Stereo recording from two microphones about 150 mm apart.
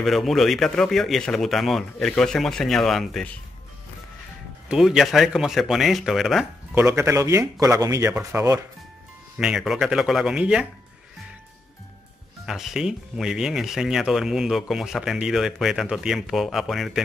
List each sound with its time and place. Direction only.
0.0 s speech: centre (ahead or behind)
4.6 s speech: 5° right (ahead or behind)
6.7 s speech: 15° right (ahead or behind)
9.4 s speech: 5° right (ahead or behind)
12.4 s speech: 5° right (ahead or behind)